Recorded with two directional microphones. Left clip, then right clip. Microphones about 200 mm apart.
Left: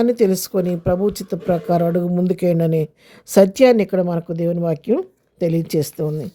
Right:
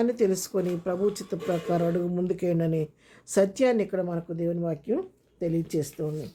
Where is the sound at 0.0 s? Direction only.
40° left (ahead or behind).